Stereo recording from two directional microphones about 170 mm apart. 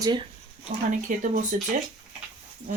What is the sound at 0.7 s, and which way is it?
Speech, 55° right (ahead or behind).